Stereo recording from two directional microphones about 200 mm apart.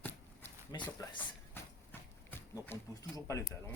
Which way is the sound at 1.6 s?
10° left (ahead or behind).